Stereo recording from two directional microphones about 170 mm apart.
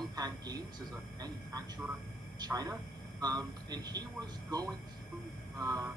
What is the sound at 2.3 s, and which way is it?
A man's voice, 20° right (ahead or behind).